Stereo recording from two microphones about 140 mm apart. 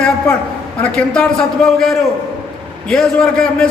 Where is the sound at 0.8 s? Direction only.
10° left (ahead or behind).